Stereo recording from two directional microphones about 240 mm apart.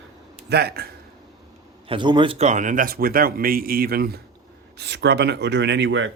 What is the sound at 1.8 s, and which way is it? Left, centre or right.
A man's voice, centre.